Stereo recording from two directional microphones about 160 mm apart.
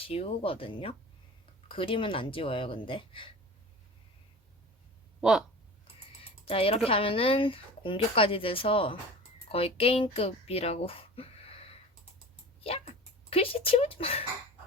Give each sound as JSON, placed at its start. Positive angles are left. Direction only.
{"t": 0.0, "sound": "speech", "side_deg": 35}
{"t": 6.4, "sound": "speech", "side_deg": 35}
{"t": 12.5, "sound": "a sound", "side_deg": 40}
{"t": 13.7, "sound": "speech", "side_deg": 35}